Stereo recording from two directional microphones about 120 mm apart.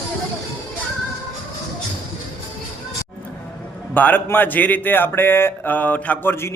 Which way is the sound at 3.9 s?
15° left (ahead or behind).